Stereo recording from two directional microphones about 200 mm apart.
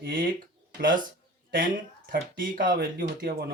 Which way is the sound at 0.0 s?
45° right (ahead or behind).